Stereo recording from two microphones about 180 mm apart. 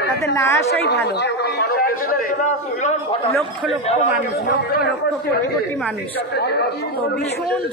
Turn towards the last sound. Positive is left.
turn(degrees=65)  # may be behind; listen again after turning